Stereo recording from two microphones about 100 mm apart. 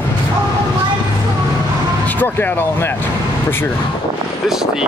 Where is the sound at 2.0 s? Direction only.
20° left (ahead or behind).